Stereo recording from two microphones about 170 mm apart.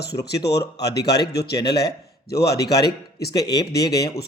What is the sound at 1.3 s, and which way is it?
Speech, 75° left (ahead or behind).